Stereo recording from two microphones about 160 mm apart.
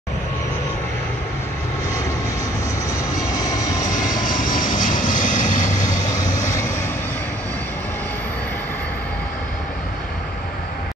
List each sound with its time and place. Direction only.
3.3 s vehicle: 20° left (ahead or behind)
4.5 s vehicle: 55° left (ahead or behind)
6.1 s vehicle: 20° left (ahead or behind)